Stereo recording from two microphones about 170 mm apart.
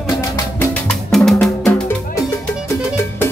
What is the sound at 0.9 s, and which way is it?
Music, centre (ahead or behind).